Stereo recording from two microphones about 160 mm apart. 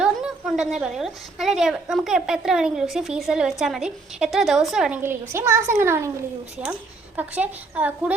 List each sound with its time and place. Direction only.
0.0 s a woman's voice: 5° right (ahead or behind)
5.0 s speech: 15° right (ahead or behind)
7.2 s speech: 10° right (ahead or behind)